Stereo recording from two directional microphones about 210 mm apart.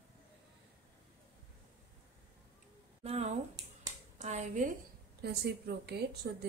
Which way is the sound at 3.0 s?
30° right (ahead or behind).